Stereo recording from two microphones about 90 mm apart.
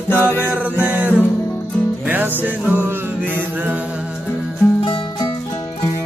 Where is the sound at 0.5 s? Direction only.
15° right (ahead or behind).